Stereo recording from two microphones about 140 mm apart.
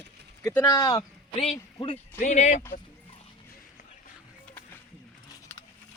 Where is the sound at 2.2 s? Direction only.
55° left (ahead or behind).